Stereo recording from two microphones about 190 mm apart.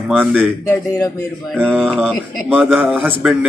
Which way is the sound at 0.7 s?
15° left (ahead or behind).